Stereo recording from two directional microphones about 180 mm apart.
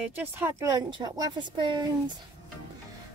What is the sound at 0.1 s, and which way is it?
Speech, 15° right (ahead or behind).